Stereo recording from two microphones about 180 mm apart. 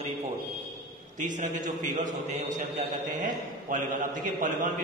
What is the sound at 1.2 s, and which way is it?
A man's voice, 45° right (ahead or behind).